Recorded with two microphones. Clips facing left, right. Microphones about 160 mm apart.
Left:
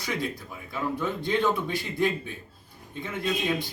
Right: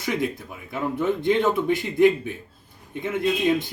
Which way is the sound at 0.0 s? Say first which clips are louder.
Right 5 dB; 20° right (ahead or behind).